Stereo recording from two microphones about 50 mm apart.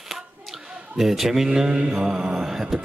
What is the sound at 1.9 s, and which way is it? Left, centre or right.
Mantra, centre.